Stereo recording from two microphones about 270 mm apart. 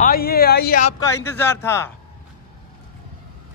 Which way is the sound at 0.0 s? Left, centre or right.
Left.